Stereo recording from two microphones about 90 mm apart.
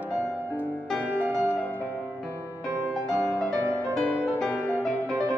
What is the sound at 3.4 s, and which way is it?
Music, 20° left (ahead or behind).